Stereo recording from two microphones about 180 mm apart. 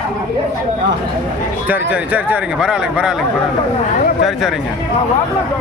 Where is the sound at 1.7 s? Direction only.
10° right (ahead or behind).